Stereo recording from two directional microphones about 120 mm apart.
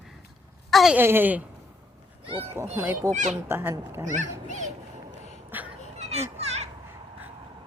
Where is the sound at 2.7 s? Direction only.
20° right (ahead or behind).